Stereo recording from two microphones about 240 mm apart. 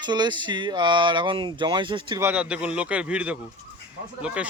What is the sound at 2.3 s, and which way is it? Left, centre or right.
A man's voice, centre.